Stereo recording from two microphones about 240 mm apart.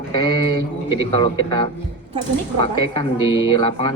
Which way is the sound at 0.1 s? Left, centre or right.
Centre.